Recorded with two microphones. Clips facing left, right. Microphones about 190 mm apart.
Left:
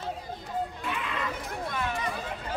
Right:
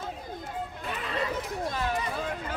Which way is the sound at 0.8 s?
40° right (ahead or behind).